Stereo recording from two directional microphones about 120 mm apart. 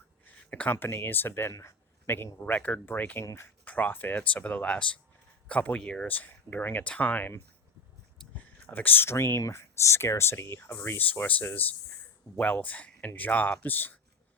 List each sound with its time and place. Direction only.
0.3 s speech: 15° left (ahead or behind)
8.2 s a sound: 5° left (ahead or behind)
8.6 s speech: 15° left (ahead or behind)